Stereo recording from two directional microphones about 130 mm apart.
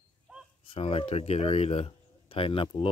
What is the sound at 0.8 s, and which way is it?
Speech, 45° left (ahead or behind).